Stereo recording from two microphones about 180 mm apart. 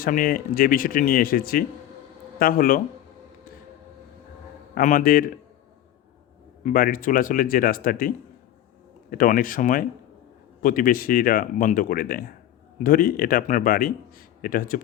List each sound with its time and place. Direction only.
0.0 s speech: 55° left (ahead or behind)
4.7 s speech: 50° left (ahead or behind)
6.7 s speech: 50° left (ahead or behind)